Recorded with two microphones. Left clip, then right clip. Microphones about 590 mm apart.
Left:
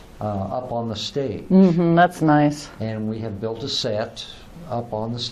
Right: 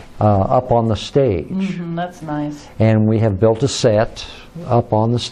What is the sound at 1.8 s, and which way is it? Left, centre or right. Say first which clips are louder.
Speech: left 9 dB; left.